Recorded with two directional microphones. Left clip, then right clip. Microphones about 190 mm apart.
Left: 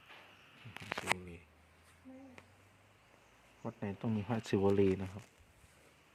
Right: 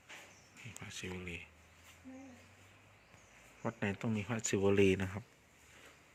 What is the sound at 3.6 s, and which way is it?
Speech, 5° left (ahead or behind).